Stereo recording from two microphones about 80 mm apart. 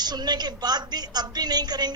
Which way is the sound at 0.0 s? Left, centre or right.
Right.